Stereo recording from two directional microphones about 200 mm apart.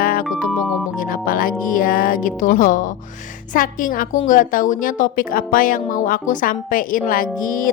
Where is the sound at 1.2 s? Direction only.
45° left (ahead or behind).